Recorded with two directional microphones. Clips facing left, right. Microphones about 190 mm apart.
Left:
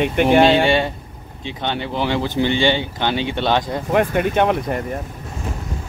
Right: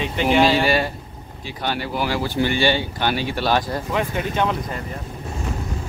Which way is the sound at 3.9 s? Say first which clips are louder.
Left 8 dB; 55° left (ahead or behind).